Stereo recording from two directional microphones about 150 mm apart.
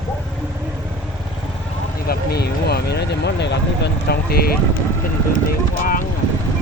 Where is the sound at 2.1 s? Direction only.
90° left.